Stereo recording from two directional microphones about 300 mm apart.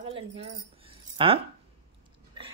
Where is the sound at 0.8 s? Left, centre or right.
Centre.